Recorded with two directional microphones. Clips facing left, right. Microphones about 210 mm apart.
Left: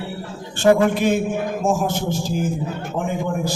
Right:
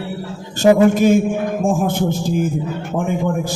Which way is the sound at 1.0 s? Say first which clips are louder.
Right 6 dB; 45° right (ahead or behind).